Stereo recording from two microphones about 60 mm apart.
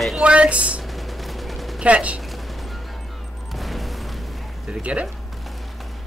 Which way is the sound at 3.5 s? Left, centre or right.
Centre.